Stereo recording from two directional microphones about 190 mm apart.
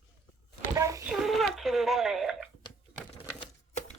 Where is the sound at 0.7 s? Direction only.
15° right (ahead or behind).